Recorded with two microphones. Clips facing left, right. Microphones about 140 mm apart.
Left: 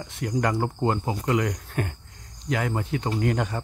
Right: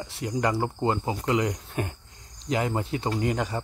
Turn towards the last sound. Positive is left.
turn(degrees=-5)  # may be behind; listen again after turning